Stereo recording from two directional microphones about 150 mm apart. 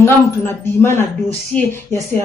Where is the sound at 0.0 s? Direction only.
15° left (ahead or behind).